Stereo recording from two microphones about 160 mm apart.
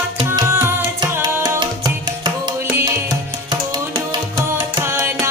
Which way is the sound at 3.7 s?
30° right (ahead or behind).